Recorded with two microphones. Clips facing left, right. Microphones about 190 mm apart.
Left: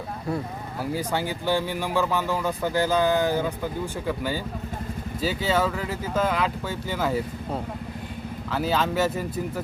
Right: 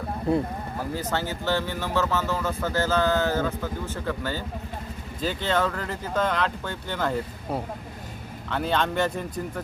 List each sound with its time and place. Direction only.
0.8 s speech: 10° left (ahead or behind)
8.4 s speech: 5° left (ahead or behind)